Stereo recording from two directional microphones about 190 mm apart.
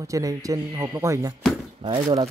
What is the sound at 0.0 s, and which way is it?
Speech, 15° right (ahead or behind).